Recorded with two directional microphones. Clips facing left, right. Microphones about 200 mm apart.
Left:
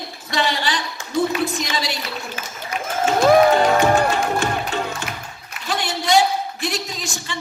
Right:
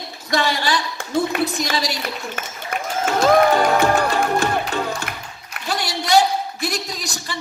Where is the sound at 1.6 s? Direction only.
40° right (ahead or behind).